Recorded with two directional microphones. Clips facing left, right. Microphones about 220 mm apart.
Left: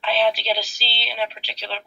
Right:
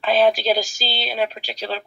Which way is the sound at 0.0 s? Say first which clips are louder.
Right 4 dB; 45° right (ahead or behind).